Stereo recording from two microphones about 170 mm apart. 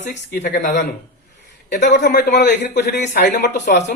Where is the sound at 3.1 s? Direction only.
80° left.